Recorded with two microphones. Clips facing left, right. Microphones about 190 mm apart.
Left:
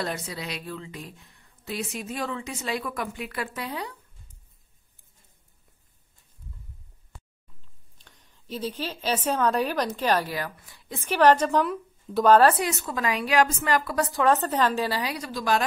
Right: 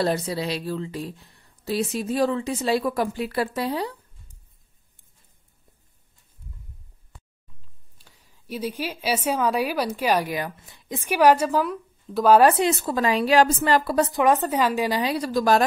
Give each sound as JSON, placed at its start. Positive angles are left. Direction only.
{"t": 0.0, "sound": "speech", "side_deg": -35}
{"t": 8.0, "sound": "a woman's voice", "side_deg": -10}
{"t": 12.4, "sound": "a woman's voice", "side_deg": -20}
{"t": 15.1, "sound": "speech", "side_deg": -40}